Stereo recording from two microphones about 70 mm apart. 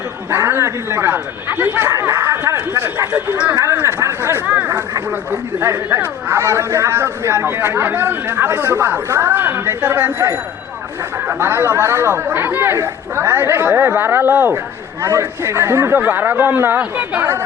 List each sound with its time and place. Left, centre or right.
0.3 s speech: right
2.0 s speech: right
3.1 s speech: right
3.5 s speech: right
11.3 s speech: right